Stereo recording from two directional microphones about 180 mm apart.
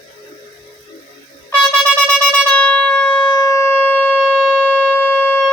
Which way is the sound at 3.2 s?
20° left (ahead or behind).